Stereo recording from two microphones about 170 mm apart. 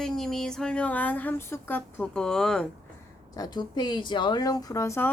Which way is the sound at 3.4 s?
25° left (ahead or behind).